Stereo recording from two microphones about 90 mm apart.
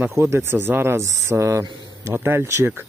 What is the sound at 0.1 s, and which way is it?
Speech, 30° right (ahead or behind).